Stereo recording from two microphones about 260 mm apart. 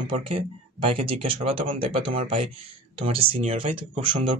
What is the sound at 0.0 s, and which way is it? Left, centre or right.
Speech, centre.